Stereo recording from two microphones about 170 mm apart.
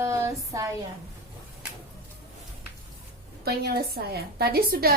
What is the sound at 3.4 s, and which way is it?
A woman's voice, 65° right (ahead or behind).